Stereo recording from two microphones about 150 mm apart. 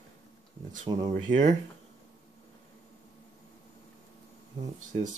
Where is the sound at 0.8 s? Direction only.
30° right (ahead or behind).